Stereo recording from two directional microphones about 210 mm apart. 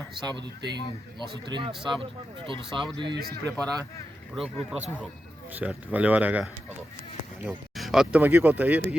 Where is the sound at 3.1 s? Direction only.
45° right (ahead or behind).